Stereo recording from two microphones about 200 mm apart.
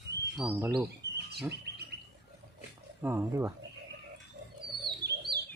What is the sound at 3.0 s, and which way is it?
Speech, 10° right (ahead or behind).